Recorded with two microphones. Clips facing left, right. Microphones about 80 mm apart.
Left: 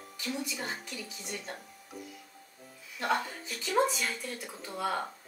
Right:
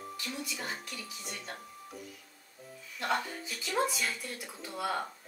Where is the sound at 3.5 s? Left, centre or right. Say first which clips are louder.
Left 4 dB; centre.